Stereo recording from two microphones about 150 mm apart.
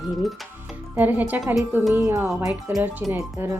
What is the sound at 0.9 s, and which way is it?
Speech, 10° right (ahead or behind).